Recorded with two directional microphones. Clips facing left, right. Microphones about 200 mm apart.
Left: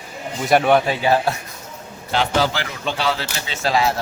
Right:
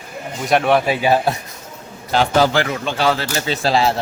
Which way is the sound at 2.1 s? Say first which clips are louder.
Right 5 dB; 50° right (ahead or behind).